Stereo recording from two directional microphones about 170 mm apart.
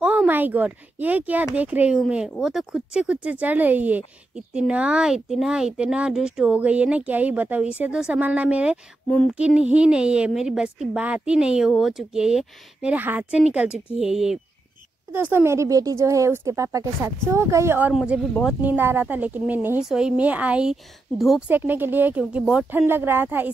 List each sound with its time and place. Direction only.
0.0 s a woman's voice: 5° right (ahead or behind)
18.6 s speech: 10° right (ahead or behind)